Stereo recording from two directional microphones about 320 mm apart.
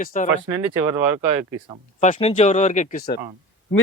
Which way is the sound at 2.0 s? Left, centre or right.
Left.